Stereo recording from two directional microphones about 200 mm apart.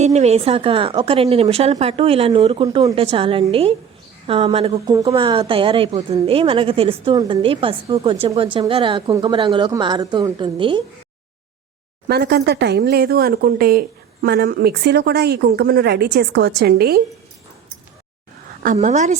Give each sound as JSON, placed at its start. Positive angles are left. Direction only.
{"t": 0.0, "sound": "a woman's voice", "side_deg": -35}
{"t": 12.0, "sound": "speech", "side_deg": -50}
{"t": 18.6, "sound": "a woman's voice", "side_deg": -40}